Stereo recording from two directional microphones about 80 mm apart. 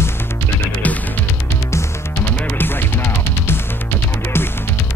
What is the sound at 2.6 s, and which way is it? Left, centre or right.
Music, left.